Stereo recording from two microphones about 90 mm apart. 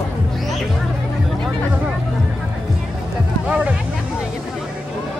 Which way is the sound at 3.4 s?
10° right (ahead or behind).